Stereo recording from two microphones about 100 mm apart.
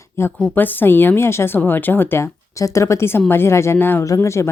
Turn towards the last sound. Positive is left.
turn(degrees=25)  # may be behind; listen again after turning